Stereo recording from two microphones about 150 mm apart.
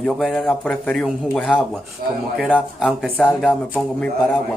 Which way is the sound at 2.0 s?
75° right (ahead or behind).